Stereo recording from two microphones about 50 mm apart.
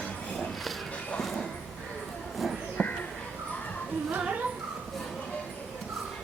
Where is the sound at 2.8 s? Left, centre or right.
Left.